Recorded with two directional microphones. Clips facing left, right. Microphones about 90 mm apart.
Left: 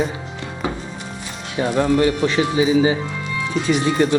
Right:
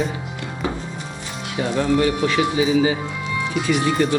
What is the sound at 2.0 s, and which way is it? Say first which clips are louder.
Speech: left 1 dB; 30° left (ahead or behind).